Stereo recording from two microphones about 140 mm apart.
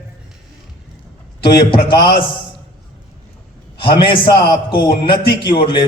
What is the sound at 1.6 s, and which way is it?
Speech, 35° left (ahead or behind).